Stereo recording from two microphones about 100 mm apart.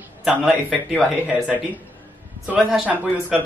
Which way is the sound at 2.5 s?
10° right (ahead or behind).